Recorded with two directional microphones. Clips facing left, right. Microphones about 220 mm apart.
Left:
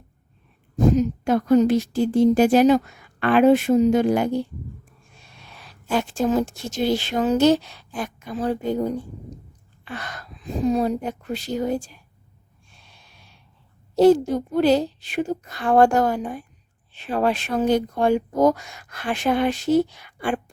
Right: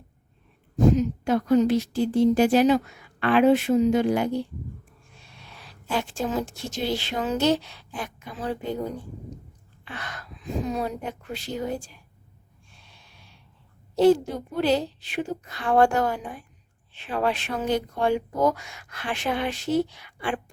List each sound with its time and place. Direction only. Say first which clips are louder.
0.9 s a woman's voice: left 3 dB; 45° left (ahead or behind)
5.9 s a woman's voice: left 6 dB; 45° left (ahead or behind)
9.9 s a woman's voice: left 4 dB; 40° left (ahead or behind)
14.0 s a woman's voice: left 4 dB; 45° left (ahead or behind)